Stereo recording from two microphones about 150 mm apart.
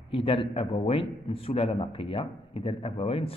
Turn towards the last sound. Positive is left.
turn(degrees=40)  # may be behind; listen again after turning